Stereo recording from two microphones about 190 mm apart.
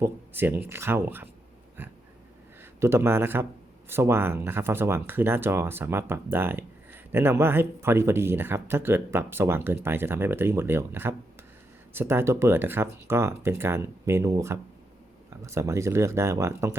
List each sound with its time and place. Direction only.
0.0 s speech: 10° right (ahead or behind)
2.8 s speech: 15° right (ahead or behind)